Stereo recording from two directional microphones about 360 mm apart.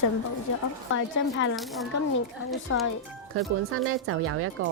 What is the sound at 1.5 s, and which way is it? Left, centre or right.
Speech, centre.